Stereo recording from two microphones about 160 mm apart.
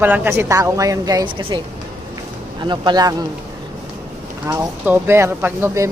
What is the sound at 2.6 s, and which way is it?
Speech, 30° right (ahead or behind).